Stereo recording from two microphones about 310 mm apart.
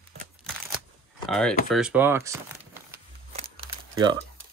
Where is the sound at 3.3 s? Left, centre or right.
Centre.